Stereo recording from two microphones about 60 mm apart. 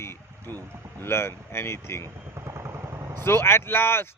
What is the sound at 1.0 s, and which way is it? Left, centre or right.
A man's voice, left.